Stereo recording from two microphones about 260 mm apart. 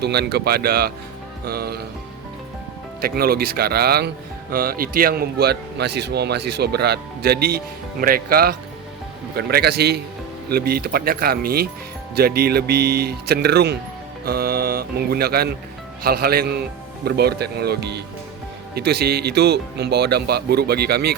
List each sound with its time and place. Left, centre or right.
0.0 s speech: right
3.0 s speech: right